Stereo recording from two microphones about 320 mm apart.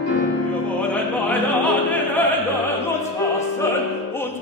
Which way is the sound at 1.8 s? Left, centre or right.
Centre.